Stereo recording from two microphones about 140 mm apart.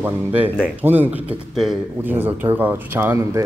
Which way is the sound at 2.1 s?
15° right (ahead or behind).